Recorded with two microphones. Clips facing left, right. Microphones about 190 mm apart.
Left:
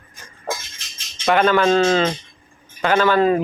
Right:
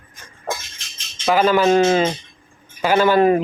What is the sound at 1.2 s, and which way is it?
Speech, 5° right (ahead or behind).